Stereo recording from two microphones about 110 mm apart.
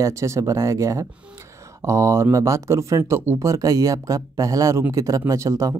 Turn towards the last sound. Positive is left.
turn(degrees=-30)  # may be behind; listen again after turning